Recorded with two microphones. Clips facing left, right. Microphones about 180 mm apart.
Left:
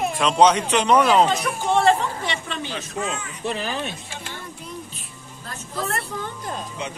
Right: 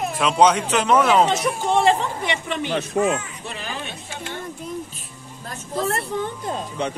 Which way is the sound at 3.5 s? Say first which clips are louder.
Left 4 dB; 40° left (ahead or behind).